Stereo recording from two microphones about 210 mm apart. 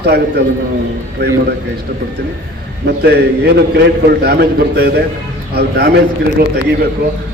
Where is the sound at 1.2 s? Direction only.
50° right (ahead or behind).